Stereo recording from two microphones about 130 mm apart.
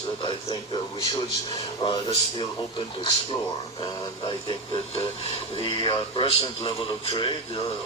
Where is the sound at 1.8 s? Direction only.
40° left (ahead or behind).